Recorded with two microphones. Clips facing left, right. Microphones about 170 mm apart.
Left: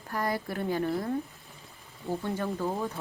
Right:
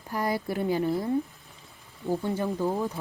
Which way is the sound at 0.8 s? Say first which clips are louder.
Right 3 dB; centre (ahead or behind).